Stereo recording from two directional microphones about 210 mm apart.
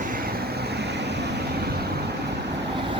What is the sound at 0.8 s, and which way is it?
Vehicle, 55° right (ahead or behind).